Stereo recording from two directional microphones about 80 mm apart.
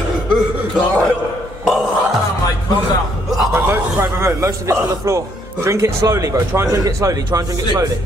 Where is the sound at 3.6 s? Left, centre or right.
Right.